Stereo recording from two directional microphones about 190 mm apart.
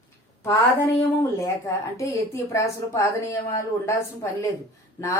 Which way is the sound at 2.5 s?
15° left (ahead or behind).